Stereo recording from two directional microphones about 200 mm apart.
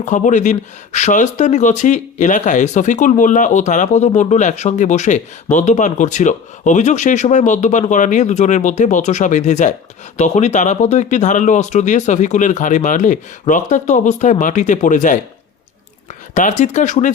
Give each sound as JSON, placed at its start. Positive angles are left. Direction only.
{"t": 0.0, "sound": "speech", "side_deg": 40}
{"t": 16.3, "sound": "speech", "side_deg": 35}